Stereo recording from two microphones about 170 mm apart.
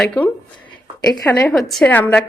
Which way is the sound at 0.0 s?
5° left (ahead or behind).